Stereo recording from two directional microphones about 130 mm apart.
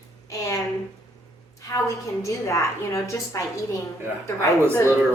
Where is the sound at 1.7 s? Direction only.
25° left (ahead or behind).